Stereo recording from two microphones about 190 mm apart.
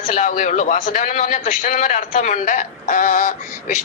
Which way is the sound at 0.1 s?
45° left (ahead or behind).